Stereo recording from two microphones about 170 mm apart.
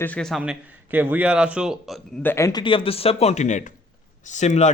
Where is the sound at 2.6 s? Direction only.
30° left (ahead or behind).